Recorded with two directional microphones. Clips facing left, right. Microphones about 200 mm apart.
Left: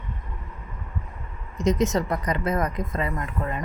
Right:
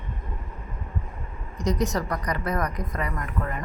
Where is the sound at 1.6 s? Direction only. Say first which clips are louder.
Left 3 dB; 25° left (ahead or behind).